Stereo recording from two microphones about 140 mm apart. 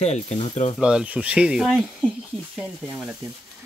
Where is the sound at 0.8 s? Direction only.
5° right (ahead or behind).